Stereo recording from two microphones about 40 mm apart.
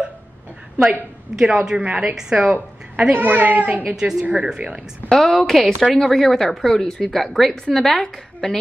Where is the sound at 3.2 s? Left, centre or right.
Right.